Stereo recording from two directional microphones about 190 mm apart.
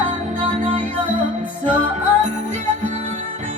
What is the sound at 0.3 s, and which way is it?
Music, 35° right (ahead or behind).